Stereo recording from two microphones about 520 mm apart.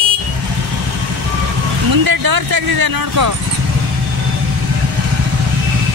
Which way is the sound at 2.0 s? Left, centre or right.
Right.